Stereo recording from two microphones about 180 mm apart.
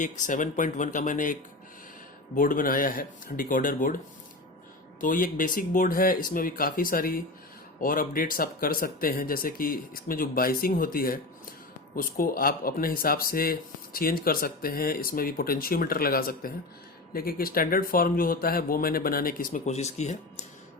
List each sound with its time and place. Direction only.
0.0 s speech: 45° left (ahead or behind)